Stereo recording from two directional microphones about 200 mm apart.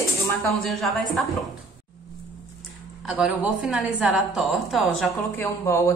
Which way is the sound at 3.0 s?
5° right (ahead or behind).